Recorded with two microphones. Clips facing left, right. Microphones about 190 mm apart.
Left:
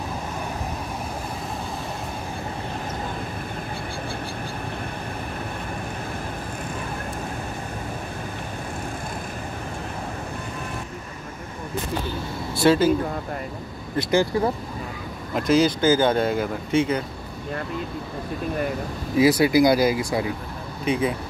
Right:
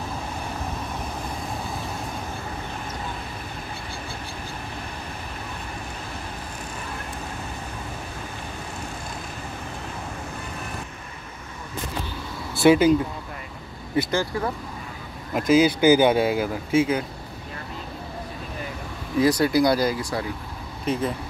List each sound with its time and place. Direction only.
12.6 s speech: 15° right (ahead or behind)
14.3 s speech: 25° left (ahead or behind)
15.3 s speech: 5° right (ahead or behind)
19.1 s speech: 10° left (ahead or behind)